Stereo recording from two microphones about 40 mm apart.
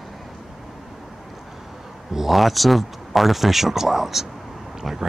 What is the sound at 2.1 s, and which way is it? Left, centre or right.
Speech, centre.